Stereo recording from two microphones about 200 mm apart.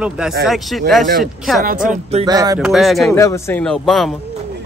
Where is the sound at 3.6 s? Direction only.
Centre (ahead or behind).